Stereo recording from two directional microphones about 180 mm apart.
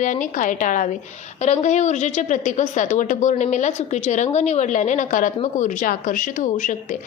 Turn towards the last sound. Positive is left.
turn(degrees=45)  # may be behind; listen again after turning